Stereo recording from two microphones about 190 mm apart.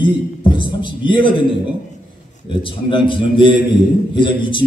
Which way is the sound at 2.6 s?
25° left (ahead or behind).